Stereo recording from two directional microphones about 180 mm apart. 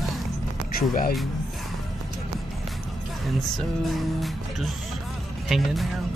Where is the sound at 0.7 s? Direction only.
55° left (ahead or behind).